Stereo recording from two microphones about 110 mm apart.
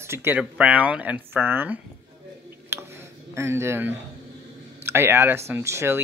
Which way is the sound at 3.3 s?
25° right (ahead or behind).